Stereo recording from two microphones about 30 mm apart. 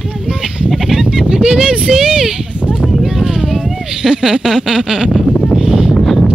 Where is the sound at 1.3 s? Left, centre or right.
Right.